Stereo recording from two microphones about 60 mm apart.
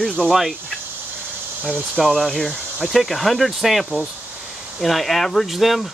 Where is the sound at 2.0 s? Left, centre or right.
Centre.